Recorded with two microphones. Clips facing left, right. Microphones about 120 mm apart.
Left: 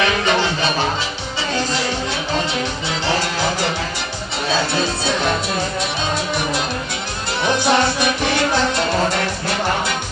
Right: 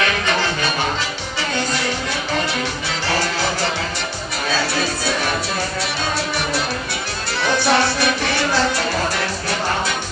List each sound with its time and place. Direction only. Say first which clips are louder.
4.7 s music: left 2 dB; 20° left (ahead or behind)
7.4 s music: left 1 dB; 20° left (ahead or behind)